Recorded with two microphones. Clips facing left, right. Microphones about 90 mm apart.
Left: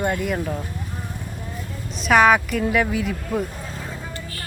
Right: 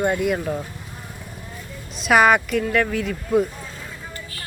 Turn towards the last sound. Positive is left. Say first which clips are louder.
# right 3 dB
turn(degrees=5)  # may be behind; listen again after turning